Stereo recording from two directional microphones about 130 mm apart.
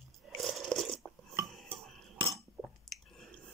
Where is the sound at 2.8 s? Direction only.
Centre (ahead or behind).